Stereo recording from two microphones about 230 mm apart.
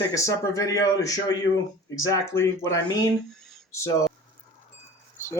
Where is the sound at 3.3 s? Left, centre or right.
Centre.